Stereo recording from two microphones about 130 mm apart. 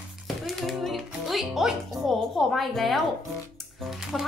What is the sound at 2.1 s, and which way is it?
Speech, centre (ahead or behind).